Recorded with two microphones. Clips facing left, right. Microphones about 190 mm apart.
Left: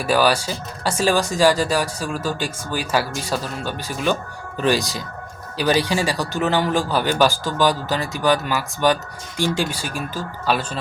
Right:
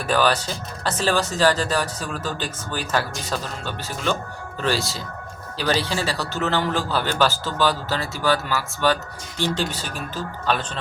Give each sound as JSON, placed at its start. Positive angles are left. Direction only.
{"t": 0.0, "sound": "speech", "side_deg": 10}